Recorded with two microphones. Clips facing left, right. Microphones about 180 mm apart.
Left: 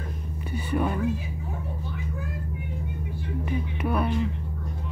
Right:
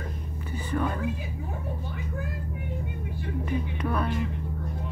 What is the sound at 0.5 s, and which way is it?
Whispering, 15° left (ahead or behind).